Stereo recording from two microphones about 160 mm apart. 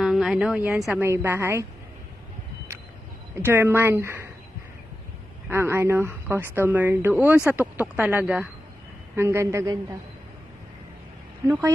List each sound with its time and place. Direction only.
0.0 s speech: centre (ahead or behind)
1.0 s speech: 15° right (ahead or behind)
3.3 s speech: 15° right (ahead or behind)
5.5 s speech: 15° right (ahead or behind)
11.4 s speech: 15° right (ahead or behind)